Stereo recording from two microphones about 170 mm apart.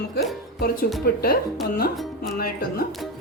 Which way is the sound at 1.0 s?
65° left (ahead or behind).